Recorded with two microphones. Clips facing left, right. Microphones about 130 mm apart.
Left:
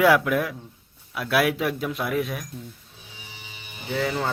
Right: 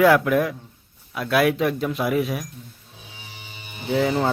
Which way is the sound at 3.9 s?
15° right (ahead or behind).